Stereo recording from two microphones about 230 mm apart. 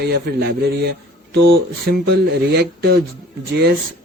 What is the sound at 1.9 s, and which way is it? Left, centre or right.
A man's voice, right.